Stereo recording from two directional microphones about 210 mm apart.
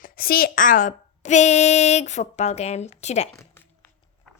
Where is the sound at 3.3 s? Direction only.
10° left (ahead or behind).